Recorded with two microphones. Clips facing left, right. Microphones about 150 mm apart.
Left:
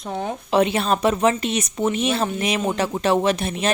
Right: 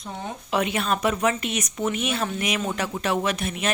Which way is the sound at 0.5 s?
30° left (ahead or behind).